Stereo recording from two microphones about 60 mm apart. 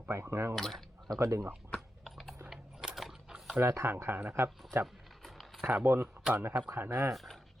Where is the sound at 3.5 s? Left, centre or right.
Right.